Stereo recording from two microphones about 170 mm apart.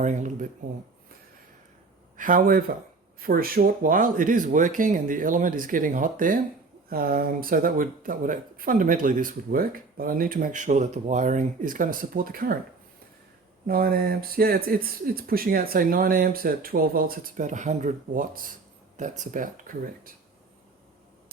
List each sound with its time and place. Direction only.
0.0 s speech: 45° right (ahead or behind)
2.1 s speech: 55° right (ahead or behind)
13.7 s speech: 60° right (ahead or behind)